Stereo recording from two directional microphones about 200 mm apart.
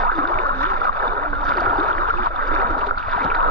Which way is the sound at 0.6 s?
10° left (ahead or behind).